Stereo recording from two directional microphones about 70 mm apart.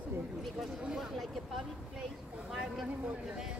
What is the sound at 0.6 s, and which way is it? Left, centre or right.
Speech, centre.